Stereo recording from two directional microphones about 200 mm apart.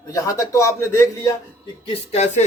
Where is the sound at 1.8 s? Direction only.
35° left (ahead or behind).